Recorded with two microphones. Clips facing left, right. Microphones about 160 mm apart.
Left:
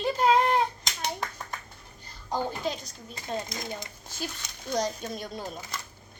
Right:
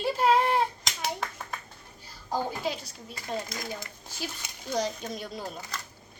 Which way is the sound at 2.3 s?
10° right (ahead or behind).